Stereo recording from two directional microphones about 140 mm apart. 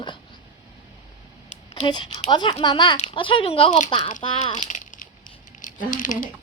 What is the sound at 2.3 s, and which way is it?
Speech, 30° left (ahead or behind).